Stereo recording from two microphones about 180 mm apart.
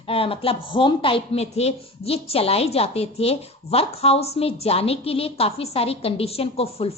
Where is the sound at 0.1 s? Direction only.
30° left (ahead or behind).